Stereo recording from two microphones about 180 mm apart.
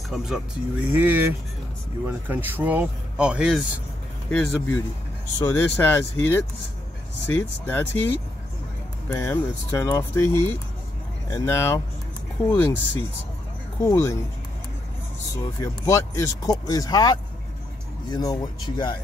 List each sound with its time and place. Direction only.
0.1 s speech: 5° right (ahead or behind)
4.3 s speech: 10° left (ahead or behind)
9.1 s speech: 15° left (ahead or behind)
15.6 s speech: 15° left (ahead or behind)